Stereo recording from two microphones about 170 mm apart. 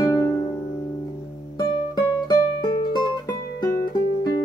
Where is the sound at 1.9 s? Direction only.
25° left (ahead or behind).